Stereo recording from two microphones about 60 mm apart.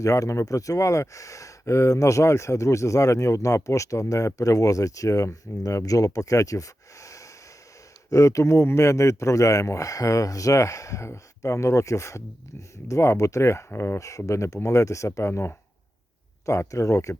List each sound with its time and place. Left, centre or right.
0.0 s a man's voice: left
13.7 s speech: left
14.0 s a man's voice: left
16.5 s a man's voice: left